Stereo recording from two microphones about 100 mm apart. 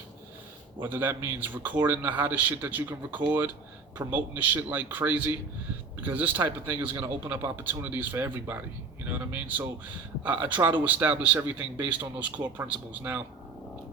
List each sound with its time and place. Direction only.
0.8 s a man's voice: 20° right (ahead or behind)
7.0 s a man's voice: 30° right (ahead or behind)
7.5 s a man's voice: 20° right (ahead or behind)